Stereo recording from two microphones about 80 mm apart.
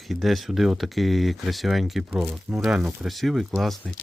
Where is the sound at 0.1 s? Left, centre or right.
Centre.